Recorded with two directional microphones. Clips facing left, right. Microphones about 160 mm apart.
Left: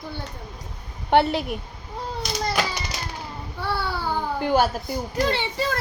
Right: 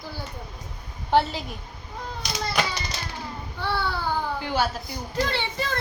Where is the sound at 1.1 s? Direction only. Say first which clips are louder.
Left 3 dB; 65° left (ahead or behind).